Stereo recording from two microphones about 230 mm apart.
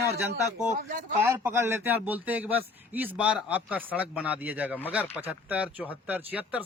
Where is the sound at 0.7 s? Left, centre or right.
Right.